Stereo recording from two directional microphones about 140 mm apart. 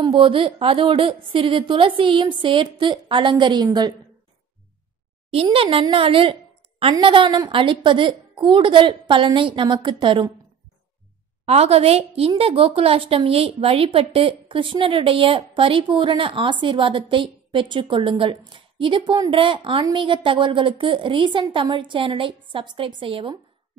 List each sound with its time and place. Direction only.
0.0 s a woman's voice: 40° right (ahead or behind)
5.3 s a woman's voice: 40° right (ahead or behind)
11.4 s a woman's voice: 50° right (ahead or behind)